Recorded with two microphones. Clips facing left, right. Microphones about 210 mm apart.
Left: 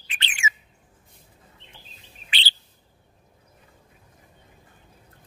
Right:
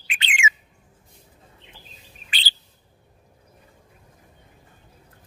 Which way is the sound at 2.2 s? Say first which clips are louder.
Left 1 dB; 40° right (ahead or behind).